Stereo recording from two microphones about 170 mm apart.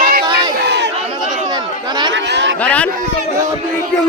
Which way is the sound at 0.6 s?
75° right (ahead or behind).